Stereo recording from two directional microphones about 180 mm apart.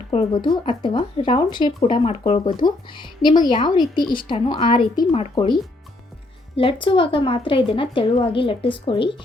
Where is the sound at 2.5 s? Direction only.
25° left (ahead or behind).